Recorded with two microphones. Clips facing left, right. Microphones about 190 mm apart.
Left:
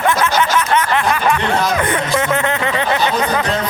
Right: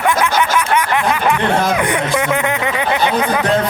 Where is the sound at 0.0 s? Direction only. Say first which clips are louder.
Even; 15° right (ahead or behind).